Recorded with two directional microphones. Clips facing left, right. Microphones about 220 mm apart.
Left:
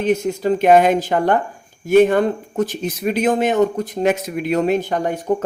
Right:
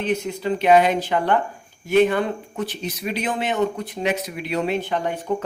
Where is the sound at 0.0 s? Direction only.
45° left (ahead or behind).